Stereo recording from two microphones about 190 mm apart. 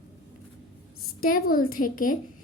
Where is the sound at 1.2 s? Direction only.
50° left (ahead or behind).